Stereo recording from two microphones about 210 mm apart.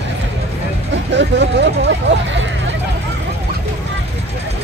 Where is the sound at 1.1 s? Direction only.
55° right (ahead or behind).